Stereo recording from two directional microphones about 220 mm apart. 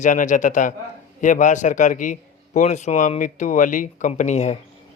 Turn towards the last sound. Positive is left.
turn(degrees=30)  # may be behind; listen again after turning